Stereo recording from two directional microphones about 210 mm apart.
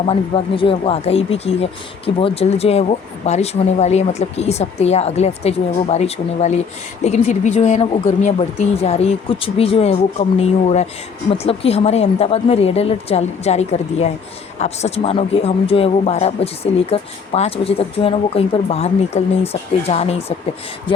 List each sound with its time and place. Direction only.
0.0 s speech: 25° left (ahead or behind)